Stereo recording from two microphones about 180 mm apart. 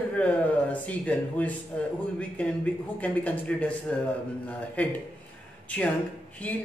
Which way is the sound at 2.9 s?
10° left (ahead or behind).